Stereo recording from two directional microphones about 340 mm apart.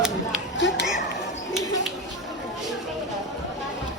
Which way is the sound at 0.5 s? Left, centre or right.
Left.